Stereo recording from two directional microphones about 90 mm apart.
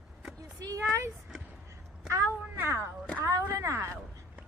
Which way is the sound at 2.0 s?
30° right (ahead or behind).